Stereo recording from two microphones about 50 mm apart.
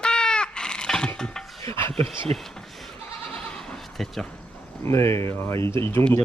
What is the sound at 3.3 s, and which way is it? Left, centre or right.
Bleat, centre.